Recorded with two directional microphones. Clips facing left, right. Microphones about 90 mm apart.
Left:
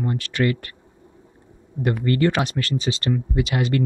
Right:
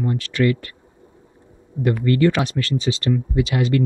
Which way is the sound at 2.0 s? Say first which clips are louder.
Right 3 dB; 35° left (ahead or behind).